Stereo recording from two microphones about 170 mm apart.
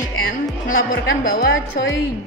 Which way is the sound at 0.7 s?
55° left (ahead or behind).